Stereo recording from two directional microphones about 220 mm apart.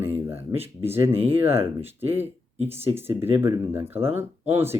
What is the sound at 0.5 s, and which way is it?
Speech, 25° right (ahead or behind).